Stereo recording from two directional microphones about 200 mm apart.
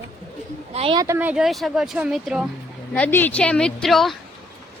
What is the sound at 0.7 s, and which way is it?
Speech, 30° right (ahead or behind).